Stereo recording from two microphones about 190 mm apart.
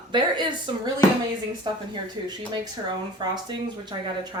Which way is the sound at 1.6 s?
20° right (ahead or behind).